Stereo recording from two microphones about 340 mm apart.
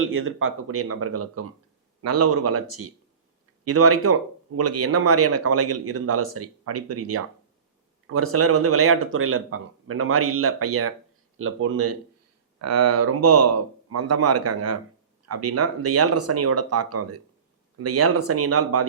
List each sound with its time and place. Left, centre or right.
0.0 s speech: right